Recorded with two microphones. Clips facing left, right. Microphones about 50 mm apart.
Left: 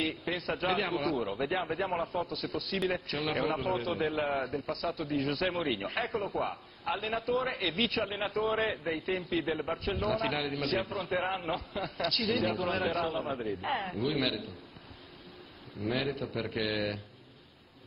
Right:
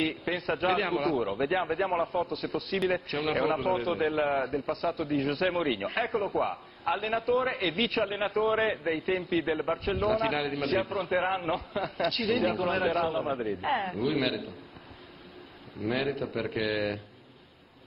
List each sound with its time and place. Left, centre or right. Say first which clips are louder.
0.0 s a man's voice: right 3 dB; centre
15.8 s a man's voice: right 3 dB; centre
16.7 s speech: right 3 dB; centre